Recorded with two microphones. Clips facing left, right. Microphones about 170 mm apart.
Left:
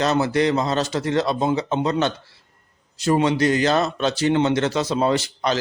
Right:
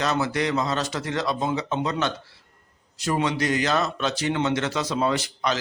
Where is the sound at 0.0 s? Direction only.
30° left (ahead or behind).